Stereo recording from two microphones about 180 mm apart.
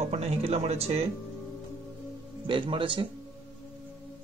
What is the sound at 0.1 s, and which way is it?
Speech, 35° right (ahead or behind).